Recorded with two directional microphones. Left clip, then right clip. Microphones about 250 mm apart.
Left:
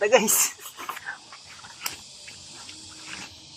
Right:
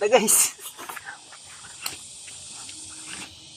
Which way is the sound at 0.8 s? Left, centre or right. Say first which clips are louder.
Left 4 dB; centre.